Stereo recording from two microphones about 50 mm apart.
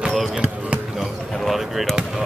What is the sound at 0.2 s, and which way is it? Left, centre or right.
Basketball bounce, centre.